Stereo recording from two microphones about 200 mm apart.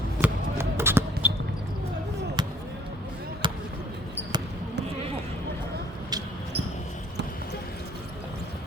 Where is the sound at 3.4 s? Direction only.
25° right (ahead or behind).